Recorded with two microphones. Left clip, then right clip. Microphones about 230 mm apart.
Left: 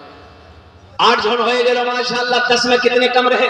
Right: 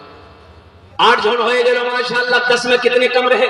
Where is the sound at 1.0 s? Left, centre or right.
Right.